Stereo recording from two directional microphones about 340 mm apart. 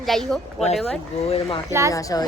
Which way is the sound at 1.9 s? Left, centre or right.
Centre.